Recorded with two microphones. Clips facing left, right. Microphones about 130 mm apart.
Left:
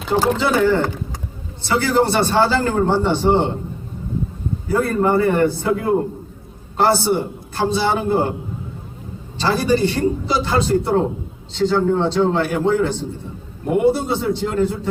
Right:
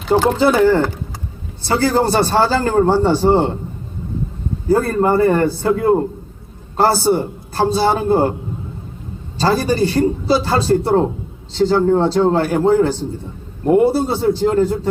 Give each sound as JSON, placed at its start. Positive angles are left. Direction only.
{"t": 0.3, "sound": "a man's voice", "side_deg": -40}
{"t": 4.7, "sound": "a man's voice", "side_deg": -40}
{"t": 9.4, "sound": "a man's voice", "side_deg": -40}